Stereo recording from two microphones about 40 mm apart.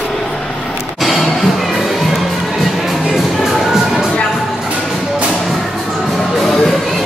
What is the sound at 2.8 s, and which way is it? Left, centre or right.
Music, centre.